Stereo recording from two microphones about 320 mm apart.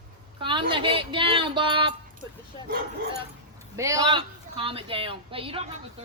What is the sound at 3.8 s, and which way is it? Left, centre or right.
A woman's voice, centre.